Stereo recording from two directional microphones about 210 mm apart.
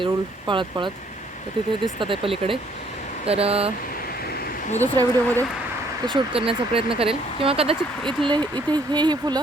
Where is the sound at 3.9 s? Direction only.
45° left (ahead or behind).